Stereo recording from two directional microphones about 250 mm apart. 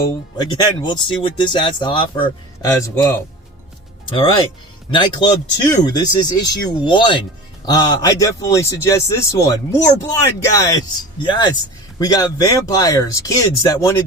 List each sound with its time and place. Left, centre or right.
0.3 s a man's voice: centre